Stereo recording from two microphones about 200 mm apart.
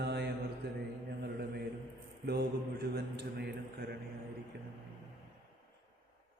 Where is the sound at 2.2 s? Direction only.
55° right (ahead or behind).